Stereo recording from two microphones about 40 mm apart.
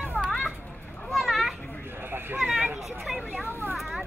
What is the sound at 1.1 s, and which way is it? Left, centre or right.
Children playing, centre.